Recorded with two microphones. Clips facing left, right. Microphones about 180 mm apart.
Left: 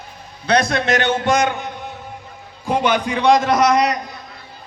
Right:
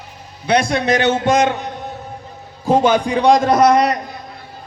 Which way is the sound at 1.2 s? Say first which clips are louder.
Right 3 dB; 25° right (ahead or behind).